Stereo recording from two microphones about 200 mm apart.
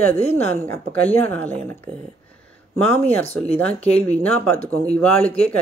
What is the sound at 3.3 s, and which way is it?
Speech, 5° left (ahead or behind).